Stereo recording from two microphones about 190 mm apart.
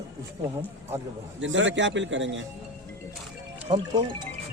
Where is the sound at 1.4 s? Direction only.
75° right (ahead or behind).